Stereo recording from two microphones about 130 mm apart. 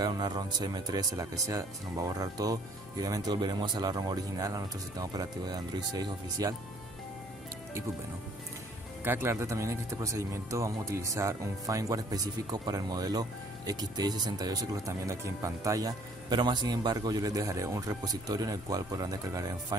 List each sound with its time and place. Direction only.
0.0 s speech: 30° right (ahead or behind)
9.0 s speech: 15° right (ahead or behind)